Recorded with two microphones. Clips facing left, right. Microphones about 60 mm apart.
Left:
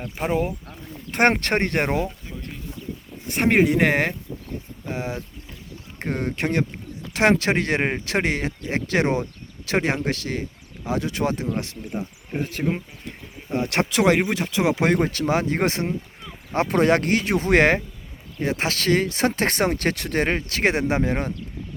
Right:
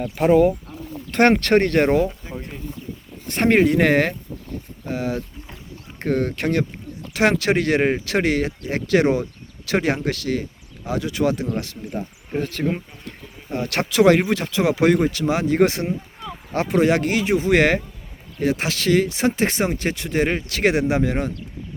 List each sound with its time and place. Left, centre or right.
0.2 s speech: centre
1.3 s speech: left
3.2 s speech: centre; by 11.8 s left
11.9 s speech: centre
12.7 s speech: left
14.8 s speech: left
16.6 s speech: left